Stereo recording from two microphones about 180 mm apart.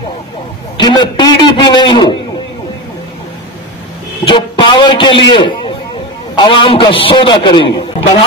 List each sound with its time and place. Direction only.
0.7 s a man's voice: 25° left (ahead or behind)
4.2 s a sound: 25° left (ahead or behind)
6.3 s a man's voice: 25° left (ahead or behind)